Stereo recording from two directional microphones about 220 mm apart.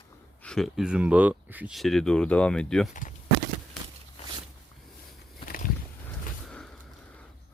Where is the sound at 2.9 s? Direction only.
35° left (ahead or behind).